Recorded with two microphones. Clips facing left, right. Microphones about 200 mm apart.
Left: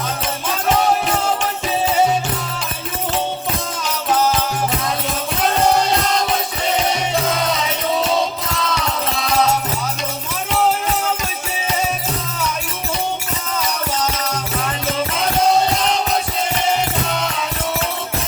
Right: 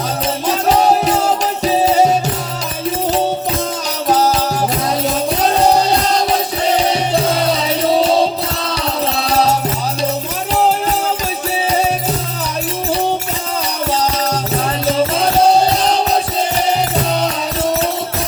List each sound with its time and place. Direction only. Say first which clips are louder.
0.4 s music: right 4 dB; 35° right (ahead or behind)
6.9 s music: right 4 dB; 35° right (ahead or behind)
13.9 s music: right 5 dB; 35° right (ahead or behind)